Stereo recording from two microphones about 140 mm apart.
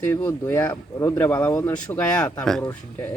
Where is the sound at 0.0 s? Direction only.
15° left (ahead or behind).